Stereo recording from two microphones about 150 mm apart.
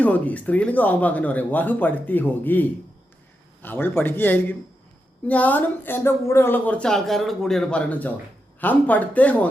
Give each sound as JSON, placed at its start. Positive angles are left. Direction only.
{"t": 0.0, "sound": "speech", "side_deg": 10}